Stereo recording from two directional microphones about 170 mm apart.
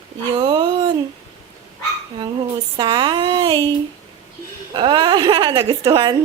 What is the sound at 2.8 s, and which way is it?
Speech, 25° right (ahead or behind).